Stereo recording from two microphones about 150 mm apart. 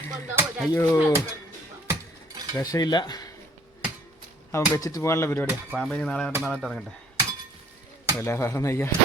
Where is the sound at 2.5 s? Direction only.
25° left (ahead or behind).